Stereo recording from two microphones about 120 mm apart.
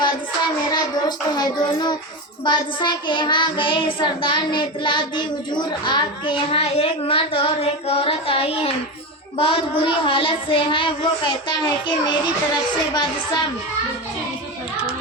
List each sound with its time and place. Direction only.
0.7 s child singing: 35° left (ahead or behind)
12.9 s speech: 35° left (ahead or behind)